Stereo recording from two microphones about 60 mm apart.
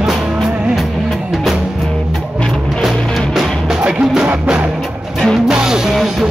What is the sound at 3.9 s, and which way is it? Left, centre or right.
Music, centre.